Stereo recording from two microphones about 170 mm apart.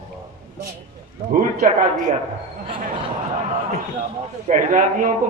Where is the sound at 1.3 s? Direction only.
50° right (ahead or behind).